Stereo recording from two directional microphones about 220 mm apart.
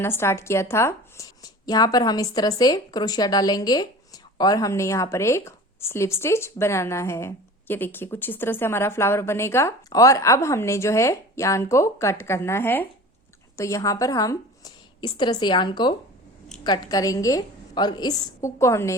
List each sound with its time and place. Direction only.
0.0 s a woman's voice: 10° left (ahead or behind)